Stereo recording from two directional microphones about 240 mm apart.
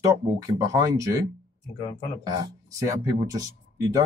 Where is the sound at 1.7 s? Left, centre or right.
Centre.